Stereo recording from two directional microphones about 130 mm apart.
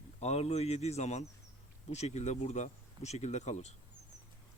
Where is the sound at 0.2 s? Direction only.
55° left (ahead or behind).